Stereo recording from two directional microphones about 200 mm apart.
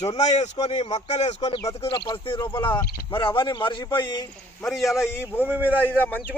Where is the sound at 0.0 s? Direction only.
35° left (ahead or behind).